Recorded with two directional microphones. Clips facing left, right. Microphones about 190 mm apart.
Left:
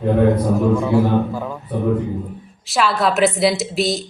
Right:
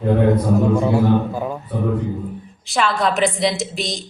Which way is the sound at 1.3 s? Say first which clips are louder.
Right 1 dB; 15° right (ahead or behind).